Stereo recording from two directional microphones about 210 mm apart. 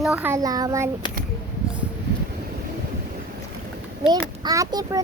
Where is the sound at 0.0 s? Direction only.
10° right (ahead or behind).